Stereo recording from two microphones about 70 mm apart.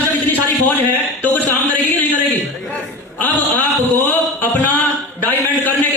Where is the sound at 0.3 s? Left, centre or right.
Left.